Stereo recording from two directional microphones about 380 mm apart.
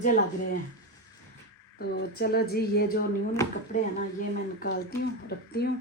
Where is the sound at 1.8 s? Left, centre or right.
Left.